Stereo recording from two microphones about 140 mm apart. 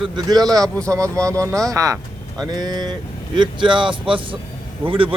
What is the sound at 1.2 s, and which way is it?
Speech, 20° right (ahead or behind).